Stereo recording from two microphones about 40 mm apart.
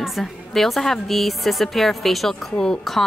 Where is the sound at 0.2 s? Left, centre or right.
Centre.